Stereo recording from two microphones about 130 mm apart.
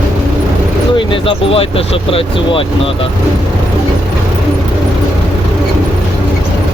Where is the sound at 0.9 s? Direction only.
45° left (ahead or behind).